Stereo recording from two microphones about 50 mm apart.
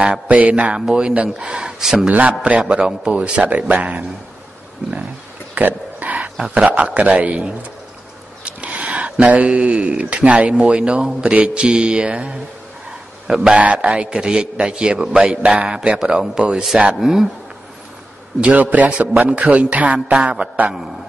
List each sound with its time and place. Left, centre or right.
0.0 s speech: right
1.8 s a man's voice: centre
2.4 s speech: right
5.5 s a sound: right
6.5 s speech: right
8.5 s a man's voice: right
13.6 s speech: right
14.1 s a man's voice: centre
18.4 s speech: right